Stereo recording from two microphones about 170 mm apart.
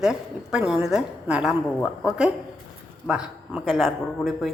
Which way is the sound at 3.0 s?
Centre (ahead or behind).